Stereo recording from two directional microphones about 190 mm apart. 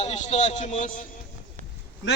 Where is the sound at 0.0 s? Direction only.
35° left (ahead or behind).